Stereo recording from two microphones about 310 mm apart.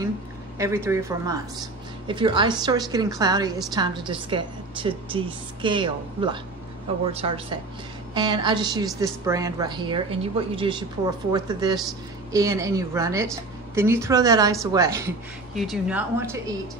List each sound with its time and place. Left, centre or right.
0.6 s a woman's voice: centre